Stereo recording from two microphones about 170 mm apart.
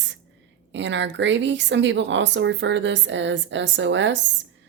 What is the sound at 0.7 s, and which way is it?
A woman's voice, 90° right.